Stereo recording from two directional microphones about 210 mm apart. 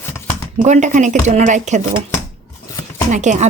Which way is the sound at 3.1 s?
35° right (ahead or behind).